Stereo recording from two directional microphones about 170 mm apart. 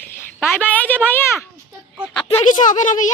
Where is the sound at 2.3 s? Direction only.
50° left (ahead or behind).